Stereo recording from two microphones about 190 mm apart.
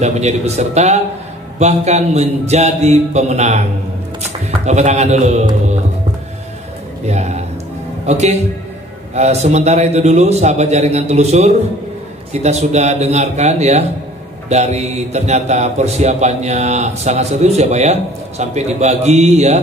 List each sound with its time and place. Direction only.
0.0 s a man's voice: 35° right (ahead or behind)
7.1 s a man's voice: 35° right (ahead or behind)